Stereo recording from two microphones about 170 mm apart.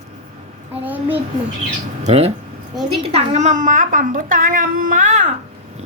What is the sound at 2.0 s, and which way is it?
A child's voice, 40° right (ahead or behind).